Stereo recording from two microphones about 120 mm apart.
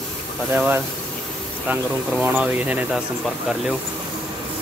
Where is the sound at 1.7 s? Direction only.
10° right (ahead or behind).